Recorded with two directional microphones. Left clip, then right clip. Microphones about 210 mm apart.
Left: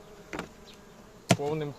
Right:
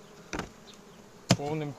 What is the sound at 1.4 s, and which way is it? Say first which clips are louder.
Speech: left 2 dB; 20° left (ahead or behind).